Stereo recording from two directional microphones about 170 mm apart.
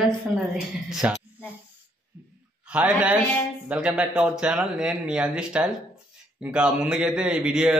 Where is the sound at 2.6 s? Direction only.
10° right (ahead or behind).